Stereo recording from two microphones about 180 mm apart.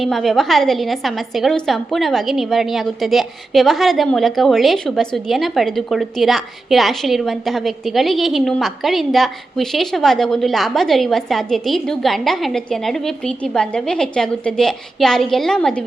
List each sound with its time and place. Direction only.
0.0 s a woman's voice: centre (ahead or behind)